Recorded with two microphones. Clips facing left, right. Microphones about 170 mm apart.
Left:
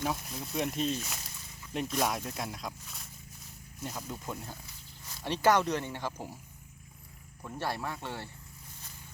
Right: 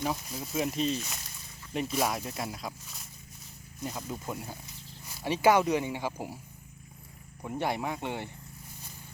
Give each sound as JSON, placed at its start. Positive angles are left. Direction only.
{"t": 0.0, "sound": "speech", "side_deg": 0}
{"t": 7.4, "sound": "speech", "side_deg": -15}